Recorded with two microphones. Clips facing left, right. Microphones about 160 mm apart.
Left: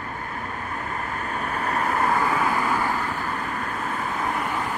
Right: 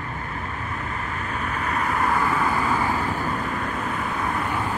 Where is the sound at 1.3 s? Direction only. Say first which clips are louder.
Left 1 dB; 40° left (ahead or behind).